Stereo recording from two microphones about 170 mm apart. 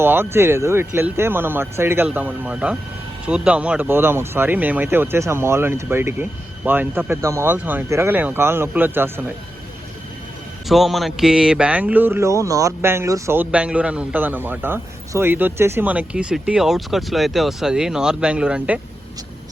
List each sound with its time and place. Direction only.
0.0 s speech: 15° right (ahead or behind)
10.7 s speech: centre (ahead or behind)